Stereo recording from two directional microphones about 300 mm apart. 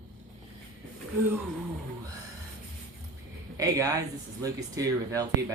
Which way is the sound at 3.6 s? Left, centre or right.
Centre.